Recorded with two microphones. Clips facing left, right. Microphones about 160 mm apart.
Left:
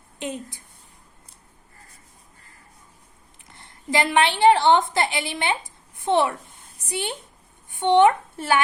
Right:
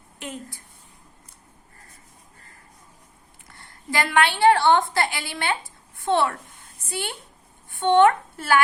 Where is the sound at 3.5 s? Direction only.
20° left (ahead or behind).